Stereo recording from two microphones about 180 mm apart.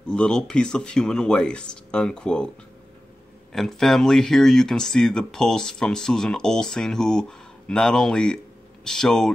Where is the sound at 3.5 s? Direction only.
Centre (ahead or behind).